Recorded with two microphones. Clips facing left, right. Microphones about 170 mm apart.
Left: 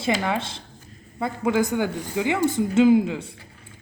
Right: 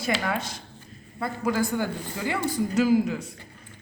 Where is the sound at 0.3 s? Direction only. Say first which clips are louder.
Left 3 dB; 25° left (ahead or behind).